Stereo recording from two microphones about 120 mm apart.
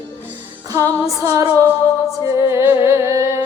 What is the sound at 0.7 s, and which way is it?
Music, 25° right (ahead or behind).